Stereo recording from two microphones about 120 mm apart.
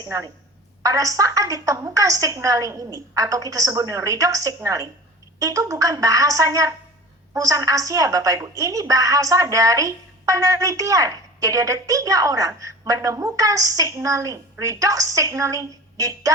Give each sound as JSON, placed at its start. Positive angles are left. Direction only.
{"t": 0.8, "sound": "a woman's voice", "side_deg": -30}